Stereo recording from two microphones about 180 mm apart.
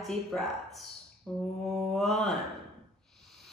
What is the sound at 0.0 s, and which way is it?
Speech, centre (ahead or behind).